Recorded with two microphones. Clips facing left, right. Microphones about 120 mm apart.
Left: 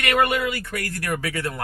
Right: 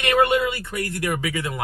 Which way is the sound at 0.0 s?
25° right (ahead or behind).